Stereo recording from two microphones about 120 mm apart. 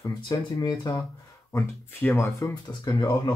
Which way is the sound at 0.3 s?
35° left (ahead or behind).